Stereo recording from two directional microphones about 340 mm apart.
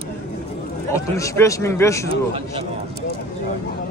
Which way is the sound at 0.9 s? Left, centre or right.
Centre.